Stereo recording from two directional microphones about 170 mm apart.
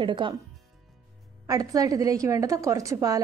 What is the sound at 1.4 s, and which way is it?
A woman's voice, 20° right (ahead or behind).